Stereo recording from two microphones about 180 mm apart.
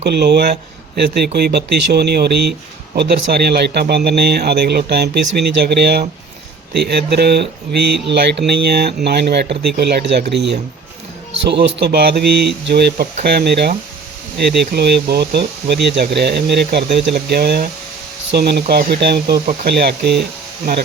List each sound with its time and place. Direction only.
0.0 s speech: 70° right (ahead or behind)